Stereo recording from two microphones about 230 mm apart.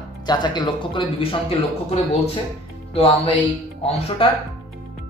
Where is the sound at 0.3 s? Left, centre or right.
Centre.